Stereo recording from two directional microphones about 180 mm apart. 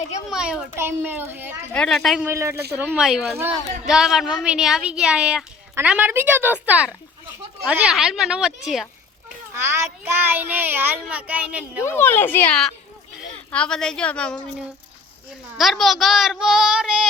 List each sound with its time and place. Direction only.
0.3 s speech: 5° right (ahead or behind)
1.7 s a woman's voice: 5° left (ahead or behind)
2.2 s a woman's voice: 15° right (ahead or behind)
9.5 s speech: 15° right (ahead or behind)
11.8 s a woman's voice: 15° left (ahead or behind)
15.5 s a woman's voice: centre (ahead or behind)